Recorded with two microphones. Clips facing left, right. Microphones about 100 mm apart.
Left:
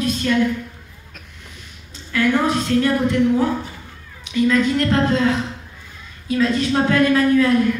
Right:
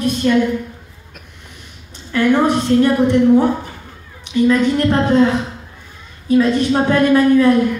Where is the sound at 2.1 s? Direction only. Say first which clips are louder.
Right 4 dB; 20° right (ahead or behind).